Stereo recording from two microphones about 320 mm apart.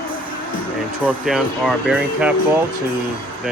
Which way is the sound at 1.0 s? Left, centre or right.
Centre.